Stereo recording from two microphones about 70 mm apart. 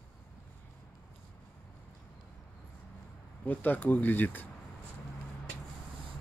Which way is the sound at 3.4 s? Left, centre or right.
Left.